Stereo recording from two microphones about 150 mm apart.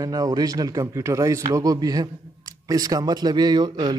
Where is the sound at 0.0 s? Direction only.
25° right (ahead or behind).